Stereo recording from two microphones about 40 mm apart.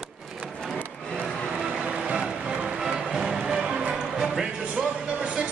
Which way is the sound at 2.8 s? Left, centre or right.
Centre.